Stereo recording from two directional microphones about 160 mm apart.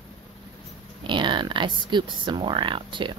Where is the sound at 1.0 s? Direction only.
30° right (ahead or behind).